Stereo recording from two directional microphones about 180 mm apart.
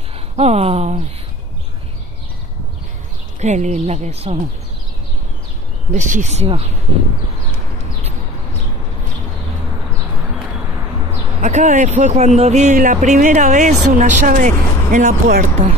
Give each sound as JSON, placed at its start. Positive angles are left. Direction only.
{"t": 0.4, "sound": "speech", "side_deg": -35}
{"t": 3.3, "sound": "speech", "side_deg": -40}
{"t": 5.9, "sound": "speech", "side_deg": -45}
{"t": 11.4, "sound": "speech", "side_deg": -40}